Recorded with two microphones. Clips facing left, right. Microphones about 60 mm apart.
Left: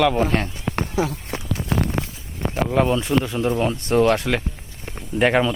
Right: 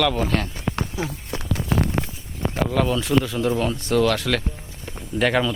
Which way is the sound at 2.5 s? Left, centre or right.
Left.